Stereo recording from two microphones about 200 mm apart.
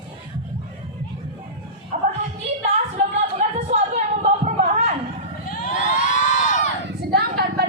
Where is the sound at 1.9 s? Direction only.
40° right (ahead or behind).